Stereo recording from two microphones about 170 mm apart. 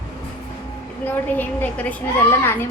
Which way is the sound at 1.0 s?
10° left (ahead or behind).